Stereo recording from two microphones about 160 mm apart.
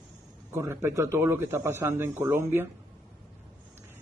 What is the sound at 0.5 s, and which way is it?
A man's voice, 15° right (ahead or behind).